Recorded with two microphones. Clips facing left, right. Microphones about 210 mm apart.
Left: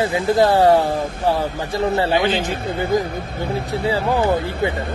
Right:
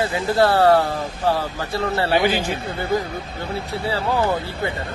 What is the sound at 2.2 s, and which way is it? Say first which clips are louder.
Speech: left 1 dB; 10° right (ahead or behind).